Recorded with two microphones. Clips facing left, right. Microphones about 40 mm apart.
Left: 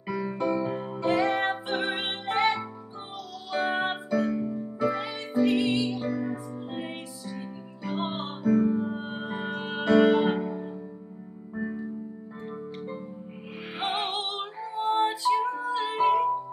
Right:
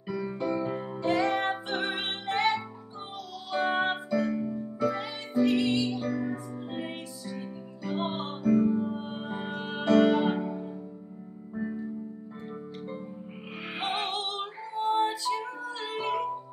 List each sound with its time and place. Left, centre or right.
0.1 s music: left
0.7 s music: centre
3.6 s music: centre
8.5 s music: centre
8.7 s music: left
13.7 s music: left